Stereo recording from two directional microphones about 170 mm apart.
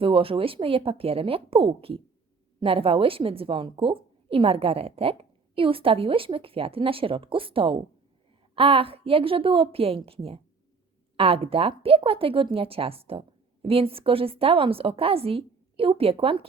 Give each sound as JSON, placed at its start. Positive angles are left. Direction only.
{"t": 0.0, "sound": "speech", "side_deg": -30}